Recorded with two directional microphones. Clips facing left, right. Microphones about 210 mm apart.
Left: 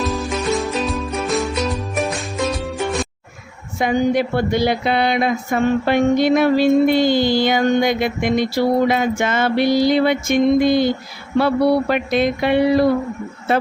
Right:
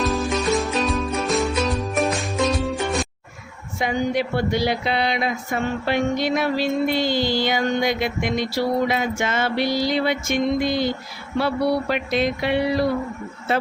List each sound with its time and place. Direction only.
0.0 s music: centre (ahead or behind)
3.8 s speech: 50° left (ahead or behind)